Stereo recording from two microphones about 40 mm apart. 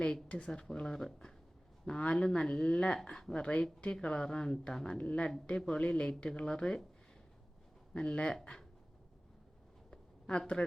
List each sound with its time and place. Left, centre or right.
0.3 s speech: left
0.6 s speech: centre
1.9 s speech: left
2.1 s speech: centre
4.7 s speech: centre
4.9 s speech: left
7.9 s speech: left
9.9 s a sound: left